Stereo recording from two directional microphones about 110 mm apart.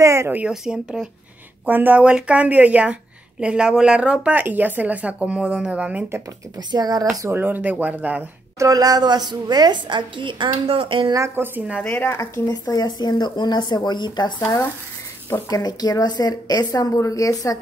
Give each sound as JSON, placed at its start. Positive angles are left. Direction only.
{"t": 0.0, "sound": "speech", "side_deg": -25}
{"t": 0.4, "sound": "a woman's voice", "side_deg": -5}
{"t": 6.7, "sound": "speech", "side_deg": -40}
{"t": 7.2, "sound": "a woman's voice", "side_deg": -25}
{"t": 8.5, "sound": "a woman's voice", "side_deg": -35}
{"t": 11.1, "sound": "speech", "side_deg": -25}
{"t": 11.8, "sound": "speech", "side_deg": 20}
{"t": 12.4, "sound": "speech", "side_deg": 35}
{"t": 14.4, "sound": "speech", "side_deg": 20}
{"t": 15.5, "sound": "speech", "side_deg": 35}